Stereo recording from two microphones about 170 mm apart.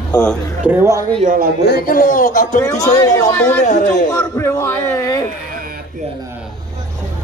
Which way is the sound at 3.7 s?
45° left (ahead or behind).